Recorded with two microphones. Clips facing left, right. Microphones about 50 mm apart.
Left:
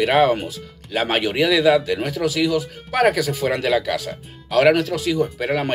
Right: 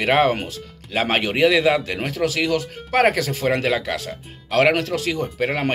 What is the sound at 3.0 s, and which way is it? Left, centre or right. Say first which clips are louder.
Speech: even; right.